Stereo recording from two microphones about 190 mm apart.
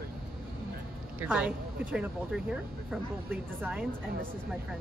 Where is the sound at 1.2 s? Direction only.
5° right (ahead or behind).